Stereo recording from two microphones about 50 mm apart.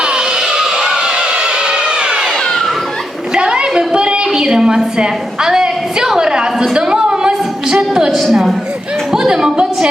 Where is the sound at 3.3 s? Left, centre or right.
Centre.